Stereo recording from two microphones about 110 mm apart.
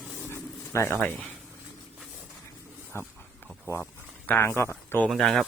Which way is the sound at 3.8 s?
15° left (ahead or behind).